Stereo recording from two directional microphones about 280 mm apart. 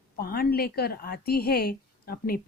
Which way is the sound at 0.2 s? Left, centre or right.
Left.